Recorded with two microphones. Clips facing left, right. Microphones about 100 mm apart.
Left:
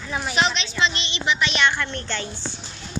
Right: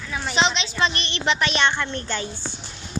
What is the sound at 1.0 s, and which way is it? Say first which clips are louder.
Speech: right 1 dB; 55° right (ahead or behind).